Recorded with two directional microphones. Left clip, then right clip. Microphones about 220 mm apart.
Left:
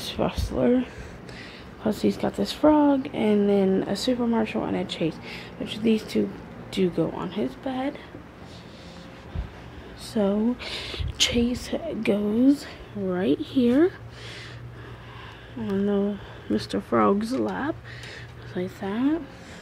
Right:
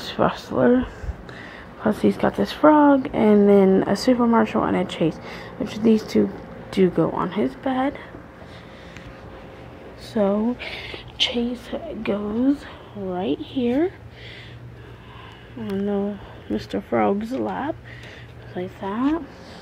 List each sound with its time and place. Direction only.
0.0 s a woman's voice: centre (ahead or behind)
3.0 s speech: 15° right (ahead or behind)
10.1 s speech: 5° left (ahead or behind)
11.2 s speech: 30° left (ahead or behind)
15.7 s speech: 20° left (ahead or behind)